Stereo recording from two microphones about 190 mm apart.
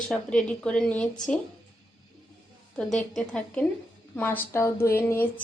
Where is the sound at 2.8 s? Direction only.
5° left (ahead or behind).